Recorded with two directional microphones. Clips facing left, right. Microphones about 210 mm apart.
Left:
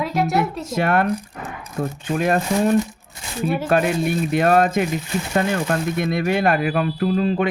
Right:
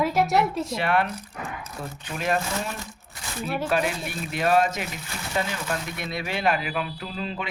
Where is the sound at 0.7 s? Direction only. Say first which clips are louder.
Left 5 dB; 45° left (ahead or behind).